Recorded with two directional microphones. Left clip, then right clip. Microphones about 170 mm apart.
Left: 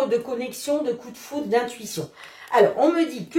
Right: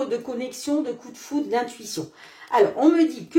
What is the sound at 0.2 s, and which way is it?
Speech, 40° right (ahead or behind).